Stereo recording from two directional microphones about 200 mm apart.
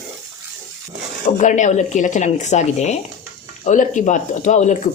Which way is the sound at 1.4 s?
35° left (ahead or behind).